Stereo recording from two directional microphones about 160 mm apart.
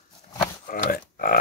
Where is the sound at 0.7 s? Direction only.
60° left (ahead or behind).